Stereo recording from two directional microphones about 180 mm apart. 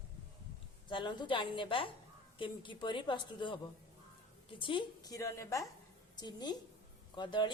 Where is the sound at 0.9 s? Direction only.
25° left (ahead or behind).